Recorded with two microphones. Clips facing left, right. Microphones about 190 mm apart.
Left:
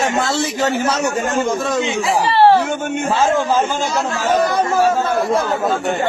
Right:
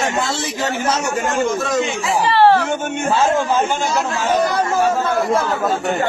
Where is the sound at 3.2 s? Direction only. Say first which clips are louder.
Left 1 dB; 30° left (ahead or behind).